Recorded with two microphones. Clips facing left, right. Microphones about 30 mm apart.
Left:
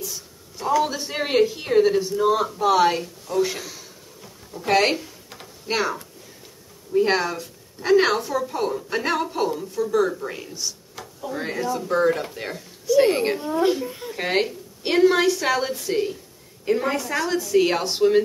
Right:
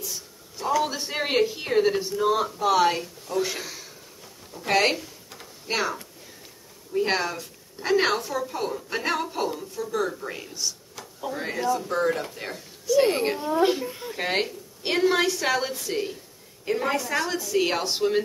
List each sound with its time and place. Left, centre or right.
0.0 s a woman's voice: centre
4.6 s a sound: centre
6.9 s a woman's voice: centre
11.0 s a sound: centre
11.3 s a woman's voice: centre
13.8 s a woman's voice: centre